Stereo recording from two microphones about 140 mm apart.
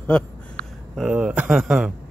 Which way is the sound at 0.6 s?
75° right (ahead or behind).